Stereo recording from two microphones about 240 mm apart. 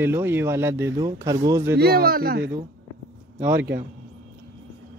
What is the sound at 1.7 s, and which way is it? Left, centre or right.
Speech, right.